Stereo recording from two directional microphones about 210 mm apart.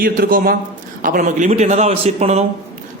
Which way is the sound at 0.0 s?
45° right (ahead or behind).